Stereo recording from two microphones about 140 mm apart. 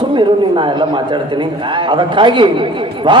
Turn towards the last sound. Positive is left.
turn(degrees=-35)  # may be behind; listen again after turning